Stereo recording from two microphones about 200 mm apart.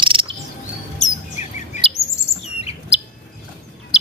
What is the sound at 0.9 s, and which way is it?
Chirp, 35° left (ahead or behind).